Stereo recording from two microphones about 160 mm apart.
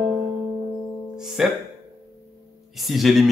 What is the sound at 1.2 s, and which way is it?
Speech, 5° right (ahead or behind).